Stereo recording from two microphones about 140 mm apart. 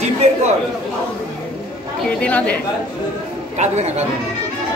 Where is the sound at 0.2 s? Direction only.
50° right (ahead or behind).